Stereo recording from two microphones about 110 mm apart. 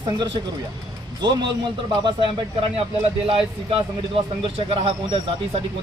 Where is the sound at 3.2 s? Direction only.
60° right (ahead or behind).